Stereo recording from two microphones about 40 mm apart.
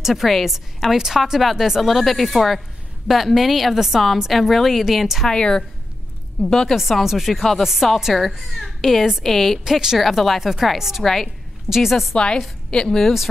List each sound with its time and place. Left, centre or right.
0.0 s speech: centre
0.9 s speech: centre
5.3 s a woman's voice: centre
6.7 s speech: centre
9.7 s a woman's voice: centre
9.9 s a woman's voice: centre
12.4 s a woman's voice: centre